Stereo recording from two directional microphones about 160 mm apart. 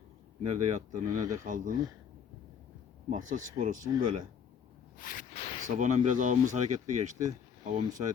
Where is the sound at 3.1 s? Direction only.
55° right (ahead or behind).